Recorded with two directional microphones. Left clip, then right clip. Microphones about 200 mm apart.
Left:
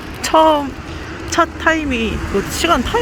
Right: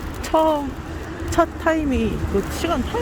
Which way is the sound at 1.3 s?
15° right (ahead or behind).